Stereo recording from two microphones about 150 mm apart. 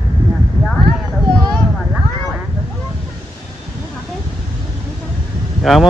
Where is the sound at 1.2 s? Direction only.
25° right (ahead or behind).